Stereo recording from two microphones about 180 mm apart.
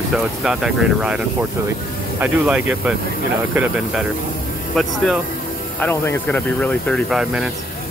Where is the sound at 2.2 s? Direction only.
5° right (ahead or behind).